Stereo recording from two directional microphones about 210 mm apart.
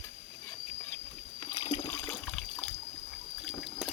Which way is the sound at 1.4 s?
20° left (ahead or behind).